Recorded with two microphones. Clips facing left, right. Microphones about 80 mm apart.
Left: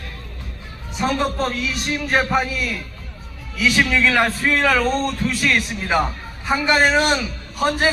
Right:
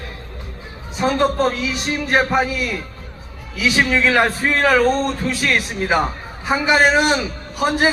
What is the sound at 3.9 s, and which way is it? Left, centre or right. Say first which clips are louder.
A man's voice: right 2 dB; centre.